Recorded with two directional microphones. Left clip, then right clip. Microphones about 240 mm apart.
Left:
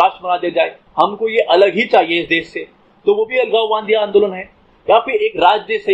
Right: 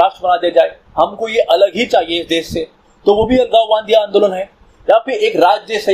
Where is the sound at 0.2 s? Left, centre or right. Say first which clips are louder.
Right 4 dB; right.